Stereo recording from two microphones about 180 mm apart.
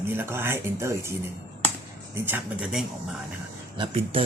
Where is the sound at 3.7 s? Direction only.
30° right (ahead or behind).